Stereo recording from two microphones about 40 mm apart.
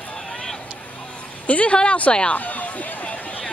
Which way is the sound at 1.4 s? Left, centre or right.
Left.